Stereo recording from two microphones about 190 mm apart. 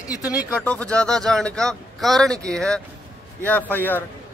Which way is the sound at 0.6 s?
5° left (ahead or behind).